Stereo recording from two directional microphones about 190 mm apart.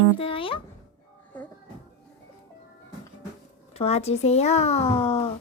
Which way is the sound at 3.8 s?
35° left (ahead or behind).